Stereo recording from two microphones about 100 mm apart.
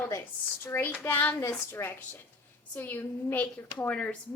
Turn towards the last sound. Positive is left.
turn(degrees=15)  # may be behind; listen again after turning